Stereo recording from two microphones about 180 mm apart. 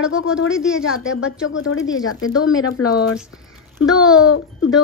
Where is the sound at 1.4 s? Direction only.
90° left.